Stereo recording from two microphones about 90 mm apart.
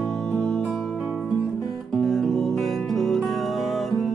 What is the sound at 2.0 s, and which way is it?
Music, centre (ahead or behind).